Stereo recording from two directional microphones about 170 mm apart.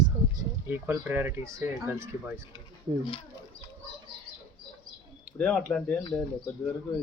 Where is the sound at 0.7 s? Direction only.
10° right (ahead or behind).